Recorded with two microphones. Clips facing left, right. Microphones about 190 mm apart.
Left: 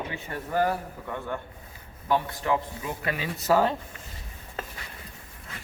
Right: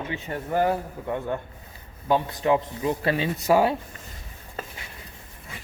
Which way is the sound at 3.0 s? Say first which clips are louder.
Right 5 dB; 30° right (ahead or behind).